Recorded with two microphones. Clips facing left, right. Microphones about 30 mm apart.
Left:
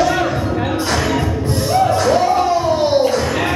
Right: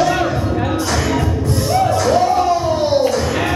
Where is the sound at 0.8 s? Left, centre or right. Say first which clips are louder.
Even; left.